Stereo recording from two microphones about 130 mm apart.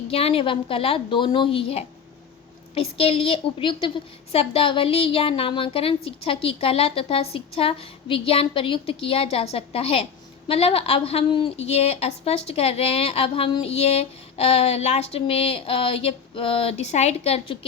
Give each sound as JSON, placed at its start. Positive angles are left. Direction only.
{"t": 0.1, "sound": "a woman's voice", "side_deg": 50}